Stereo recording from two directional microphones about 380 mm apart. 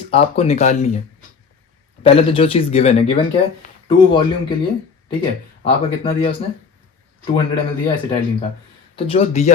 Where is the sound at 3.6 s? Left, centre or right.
Left.